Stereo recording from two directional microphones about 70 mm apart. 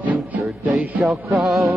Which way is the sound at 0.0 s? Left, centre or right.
Right.